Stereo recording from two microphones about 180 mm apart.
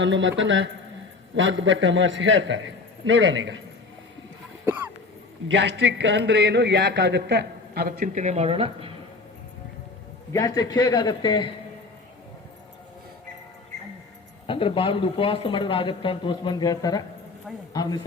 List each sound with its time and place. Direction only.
0.0 s a man's voice: 90° right
4.6 s a sound: 10° right (ahead or behind)
5.5 s a man's voice: 80° right; by 8.9 s 30° right (ahead or behind)
10.3 s speech: 20° left (ahead or behind)
14.4 s speech: 30° left (ahead or behind)